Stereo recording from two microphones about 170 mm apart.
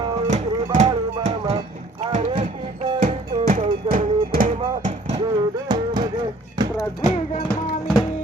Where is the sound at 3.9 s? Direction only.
50° right (ahead or behind).